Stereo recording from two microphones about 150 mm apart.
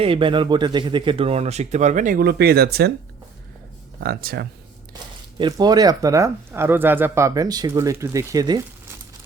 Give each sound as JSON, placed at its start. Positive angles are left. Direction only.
{"t": 0.0, "sound": "speech", "side_deg": -35}
{"t": 4.0, "sound": "speech", "side_deg": -90}
{"t": 5.4, "sound": "speech", "side_deg": -25}